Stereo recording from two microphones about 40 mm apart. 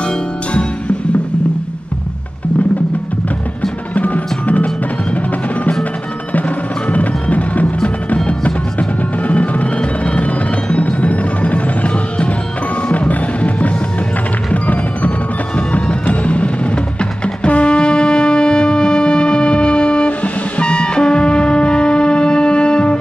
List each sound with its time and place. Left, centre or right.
3.9 s music: left
5.1 s percussion: left
6.9 s music: left